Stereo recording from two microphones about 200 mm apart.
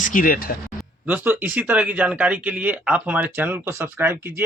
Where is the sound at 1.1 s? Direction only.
10° right (ahead or behind).